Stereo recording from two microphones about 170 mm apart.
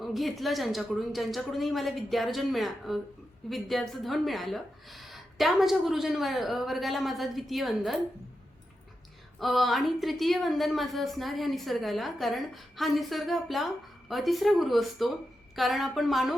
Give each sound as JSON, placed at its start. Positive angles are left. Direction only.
{"t": 0.0, "sound": "a woman's voice", "side_deg": 0}
{"t": 9.4, "sound": "a woman's voice", "side_deg": 0}